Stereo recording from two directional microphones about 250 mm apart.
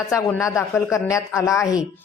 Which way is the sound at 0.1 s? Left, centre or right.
Centre.